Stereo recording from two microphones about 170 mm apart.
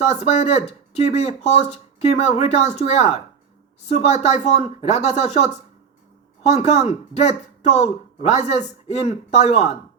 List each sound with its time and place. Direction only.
0.0 s speech: 40° left (ahead or behind)